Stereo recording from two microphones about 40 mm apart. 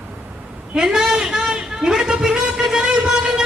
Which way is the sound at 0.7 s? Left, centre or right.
Centre.